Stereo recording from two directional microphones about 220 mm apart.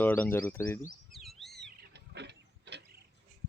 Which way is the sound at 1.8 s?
50° right (ahead or behind).